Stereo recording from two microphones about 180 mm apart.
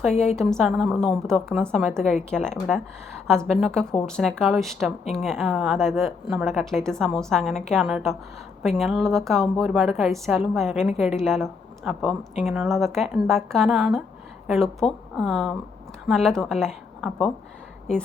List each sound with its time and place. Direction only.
0.3 s a woman's voice: centre (ahead or behind)